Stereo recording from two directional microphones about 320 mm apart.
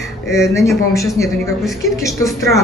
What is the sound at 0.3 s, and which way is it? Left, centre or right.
A man's voice, centre.